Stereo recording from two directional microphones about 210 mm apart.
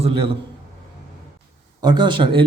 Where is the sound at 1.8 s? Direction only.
20° right (ahead or behind).